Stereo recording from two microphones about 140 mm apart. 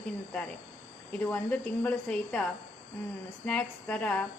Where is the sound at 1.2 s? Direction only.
10° left (ahead or behind).